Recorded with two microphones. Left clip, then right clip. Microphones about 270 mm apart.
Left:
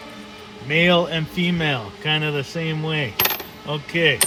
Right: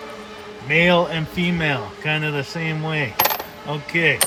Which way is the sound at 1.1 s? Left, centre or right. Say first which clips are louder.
Even; right.